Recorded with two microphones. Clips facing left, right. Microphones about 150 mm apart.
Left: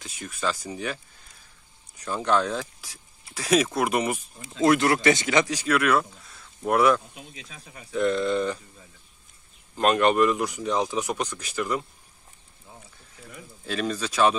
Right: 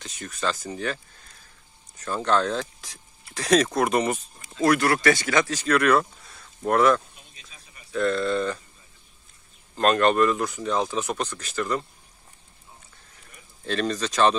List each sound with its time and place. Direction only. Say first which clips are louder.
0.0 s speech: right 1 dB; 10° left (ahead or behind)
2.0 s speech: right 1 dB; 10° left (ahead or behind)
4.4 s speech: left 1 dB; 25° left (ahead or behind)
7.2 s speech: left 9 dB; 85° left
7.9 s speech: even; 15° left (ahead or behind)
9.8 s speech: even; 10° left (ahead or behind)
13.7 s speech: right 2 dB; 10° left (ahead or behind)